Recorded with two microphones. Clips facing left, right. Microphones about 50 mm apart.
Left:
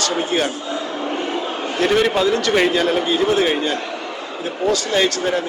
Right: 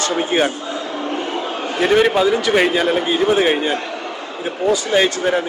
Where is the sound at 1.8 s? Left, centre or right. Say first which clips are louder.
Right 2 dB; centre.